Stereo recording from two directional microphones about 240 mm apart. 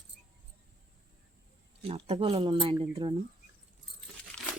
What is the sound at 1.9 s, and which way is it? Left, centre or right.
Speech, right.